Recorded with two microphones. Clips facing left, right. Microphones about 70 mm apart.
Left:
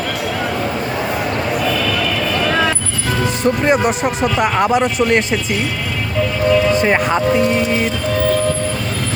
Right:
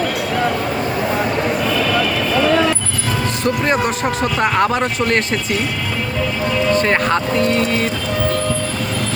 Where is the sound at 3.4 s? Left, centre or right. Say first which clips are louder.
Left 3 dB; centre.